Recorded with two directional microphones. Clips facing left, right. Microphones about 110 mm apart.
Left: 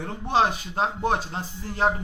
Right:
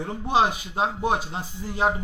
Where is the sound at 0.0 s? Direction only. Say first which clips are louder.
Right 1 dB; 10° right (ahead or behind).